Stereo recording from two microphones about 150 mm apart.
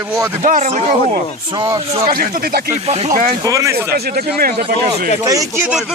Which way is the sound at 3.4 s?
20° right (ahead or behind).